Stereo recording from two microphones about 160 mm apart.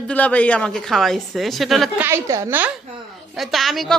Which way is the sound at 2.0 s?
15° right (ahead or behind).